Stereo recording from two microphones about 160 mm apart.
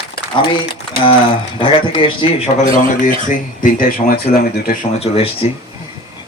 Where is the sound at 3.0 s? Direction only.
55° left (ahead or behind).